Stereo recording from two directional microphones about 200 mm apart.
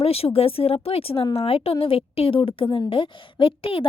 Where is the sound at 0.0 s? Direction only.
30° left (ahead or behind).